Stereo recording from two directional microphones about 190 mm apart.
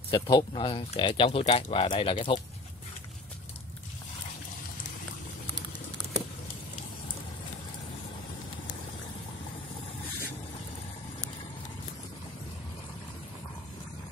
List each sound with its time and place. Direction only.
0.1 s speech: 20° left (ahead or behind)